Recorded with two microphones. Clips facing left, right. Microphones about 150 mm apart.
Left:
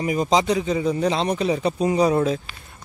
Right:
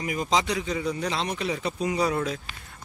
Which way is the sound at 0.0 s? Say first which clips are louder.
Left 6 dB; 25° left (ahead or behind).